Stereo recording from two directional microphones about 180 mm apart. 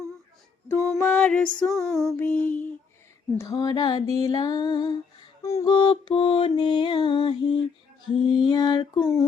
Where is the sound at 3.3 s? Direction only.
20° left (ahead or behind).